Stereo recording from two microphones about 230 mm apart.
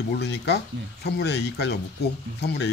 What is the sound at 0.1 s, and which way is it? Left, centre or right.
Speech, left.